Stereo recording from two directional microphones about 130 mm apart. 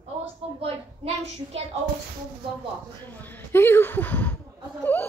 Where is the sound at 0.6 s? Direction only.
50° right (ahead or behind).